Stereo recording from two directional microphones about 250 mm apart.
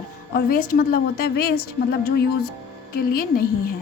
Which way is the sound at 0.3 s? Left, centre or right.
Left.